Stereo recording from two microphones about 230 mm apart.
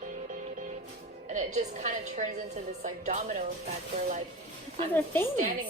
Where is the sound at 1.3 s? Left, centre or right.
Right.